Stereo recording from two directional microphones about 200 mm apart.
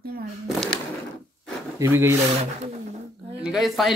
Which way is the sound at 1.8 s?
15° right (ahead or behind).